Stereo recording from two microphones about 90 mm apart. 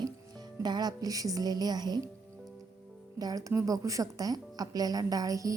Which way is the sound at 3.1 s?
45° right (ahead or behind).